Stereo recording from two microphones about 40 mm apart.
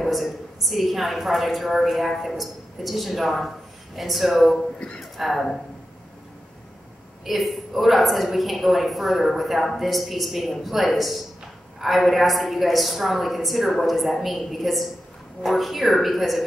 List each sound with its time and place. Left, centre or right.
0.0 s a woman's voice: centre
4.7 s speech: left
5.1 s a woman's voice: centre
7.2 s a woman's voice: centre